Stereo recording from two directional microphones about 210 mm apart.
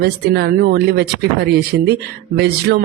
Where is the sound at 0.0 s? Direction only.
50° right (ahead or behind).